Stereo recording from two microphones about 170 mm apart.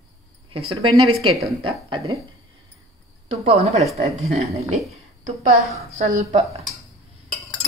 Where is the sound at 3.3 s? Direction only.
40° right (ahead or behind).